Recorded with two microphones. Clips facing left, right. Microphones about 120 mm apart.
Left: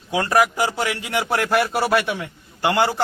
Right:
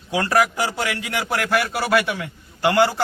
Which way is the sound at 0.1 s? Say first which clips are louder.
Left 1 dB; 20° left (ahead or behind).